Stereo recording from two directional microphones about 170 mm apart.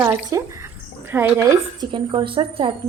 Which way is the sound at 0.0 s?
15° right (ahead or behind).